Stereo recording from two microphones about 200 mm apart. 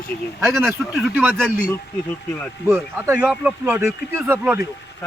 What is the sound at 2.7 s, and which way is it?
Speech, 10° right (ahead or behind).